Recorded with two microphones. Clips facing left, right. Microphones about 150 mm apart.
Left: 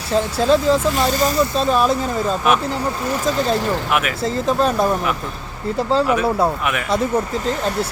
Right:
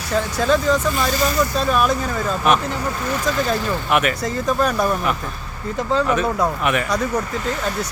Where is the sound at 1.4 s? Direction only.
25° left (ahead or behind).